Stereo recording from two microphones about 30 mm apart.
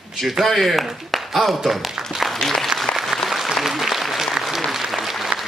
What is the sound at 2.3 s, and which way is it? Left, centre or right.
Speech, centre.